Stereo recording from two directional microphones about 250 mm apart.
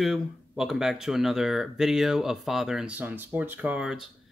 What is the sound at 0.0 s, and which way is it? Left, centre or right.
Speech, centre.